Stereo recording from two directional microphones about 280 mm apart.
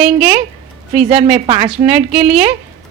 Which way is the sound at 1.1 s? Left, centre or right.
Right.